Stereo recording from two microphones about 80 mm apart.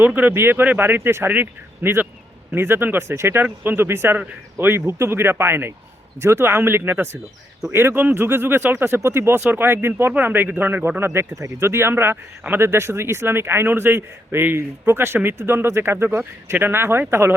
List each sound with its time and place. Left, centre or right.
0.0 s speech: right